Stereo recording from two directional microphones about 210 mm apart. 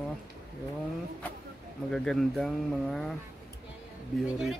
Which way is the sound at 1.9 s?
Centre (ahead or behind).